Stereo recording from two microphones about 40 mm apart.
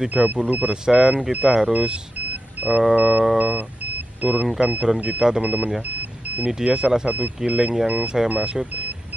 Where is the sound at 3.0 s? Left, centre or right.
Right.